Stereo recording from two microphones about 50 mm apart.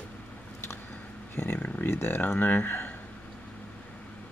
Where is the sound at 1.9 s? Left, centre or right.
Left.